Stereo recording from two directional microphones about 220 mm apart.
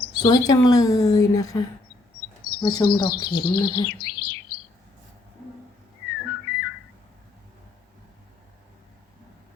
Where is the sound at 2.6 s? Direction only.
20° left (ahead or behind).